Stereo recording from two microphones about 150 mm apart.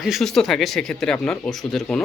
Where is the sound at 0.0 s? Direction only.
Centre (ahead or behind).